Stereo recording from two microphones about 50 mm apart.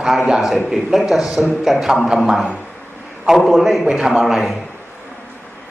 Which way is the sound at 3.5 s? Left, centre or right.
Centre.